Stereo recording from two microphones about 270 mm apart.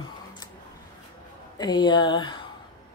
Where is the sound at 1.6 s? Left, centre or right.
Centre.